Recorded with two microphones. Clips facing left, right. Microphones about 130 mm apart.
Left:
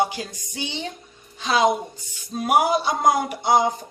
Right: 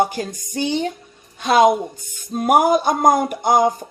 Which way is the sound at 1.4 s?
50° right (ahead or behind).